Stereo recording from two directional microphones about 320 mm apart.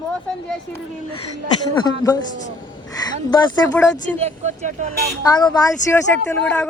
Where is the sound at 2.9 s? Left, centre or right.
Centre.